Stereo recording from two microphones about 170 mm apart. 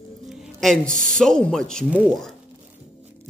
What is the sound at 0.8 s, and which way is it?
Speech, 50° right (ahead or behind).